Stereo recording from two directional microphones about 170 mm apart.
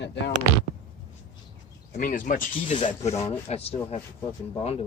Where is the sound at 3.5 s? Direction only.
35° left (ahead or behind).